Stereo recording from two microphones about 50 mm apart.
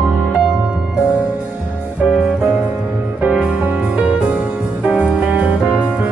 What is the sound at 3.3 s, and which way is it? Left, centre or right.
Music, right.